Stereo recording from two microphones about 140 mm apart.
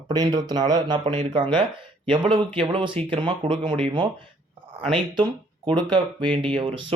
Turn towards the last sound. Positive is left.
turn(degrees=-35)  # may be behind; listen again after turning